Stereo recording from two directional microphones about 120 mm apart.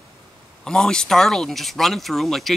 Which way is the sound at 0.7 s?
5° left (ahead or behind).